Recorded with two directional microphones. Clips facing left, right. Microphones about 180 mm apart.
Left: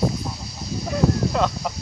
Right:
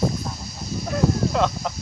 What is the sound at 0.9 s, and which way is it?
Speech, centre (ahead or behind).